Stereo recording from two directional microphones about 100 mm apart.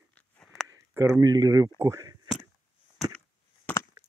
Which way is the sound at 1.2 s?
40° right (ahead or behind).